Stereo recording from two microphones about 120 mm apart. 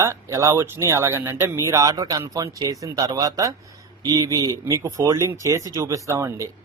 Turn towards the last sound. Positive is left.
turn(degrees=-25)  # may be behind; listen again after turning